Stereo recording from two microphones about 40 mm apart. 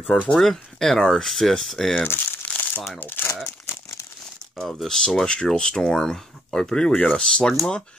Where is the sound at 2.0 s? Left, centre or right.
Left.